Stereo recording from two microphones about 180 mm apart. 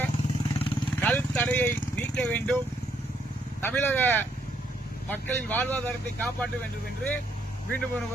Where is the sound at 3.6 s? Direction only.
10° left (ahead or behind).